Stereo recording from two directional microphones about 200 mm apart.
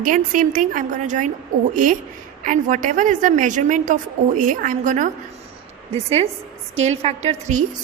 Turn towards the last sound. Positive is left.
turn(degrees=-35)  # may be behind; listen again after turning